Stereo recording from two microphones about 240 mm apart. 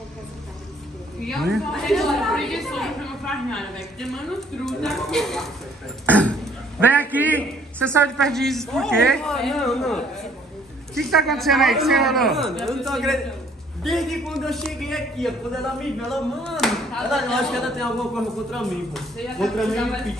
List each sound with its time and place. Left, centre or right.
1.2 s a woman's voice: centre
7.1 s a man's voice: centre